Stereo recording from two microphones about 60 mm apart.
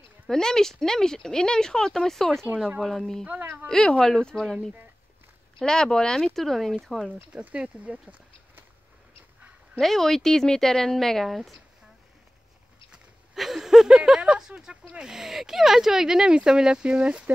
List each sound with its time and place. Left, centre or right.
0.3 s speech: centre
5.6 s speech: centre
7.3 s speech: right
9.8 s speech: centre
13.3 s speech: centre